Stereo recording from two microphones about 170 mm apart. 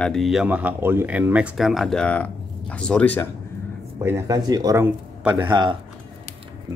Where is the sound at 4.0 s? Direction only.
15° right (ahead or behind).